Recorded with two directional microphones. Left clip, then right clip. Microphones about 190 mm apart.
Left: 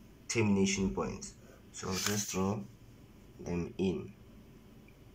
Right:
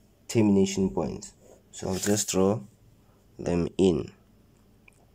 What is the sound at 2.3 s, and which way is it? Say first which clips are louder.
Speech: right 11 dB; 45° right (ahead or behind).